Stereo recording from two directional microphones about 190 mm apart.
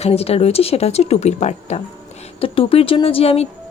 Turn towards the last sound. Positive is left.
turn(degrees=30)  # may be behind; listen again after turning